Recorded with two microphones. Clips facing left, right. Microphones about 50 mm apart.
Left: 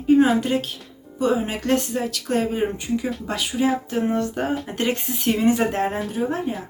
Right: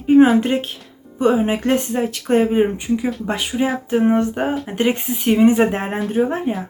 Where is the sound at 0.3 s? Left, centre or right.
Right.